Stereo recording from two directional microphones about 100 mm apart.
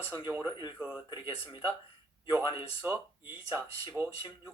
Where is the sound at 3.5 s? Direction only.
20° right (ahead or behind).